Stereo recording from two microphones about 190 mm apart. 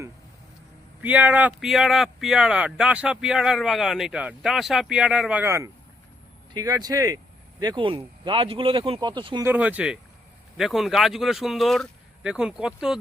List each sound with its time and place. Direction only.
1.0 s speech: 10° right (ahead or behind); by 9.5 s 25° right (ahead or behind)
9.5 s speech: 5° right (ahead or behind)